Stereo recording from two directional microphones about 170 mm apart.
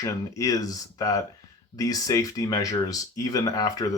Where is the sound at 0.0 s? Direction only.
20° left (ahead or behind).